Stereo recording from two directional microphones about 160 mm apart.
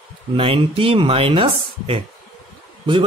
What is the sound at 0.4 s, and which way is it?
Speech, 35° right (ahead or behind).